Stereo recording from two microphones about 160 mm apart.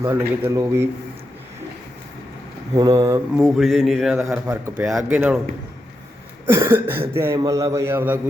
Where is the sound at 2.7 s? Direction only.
20° right (ahead or behind).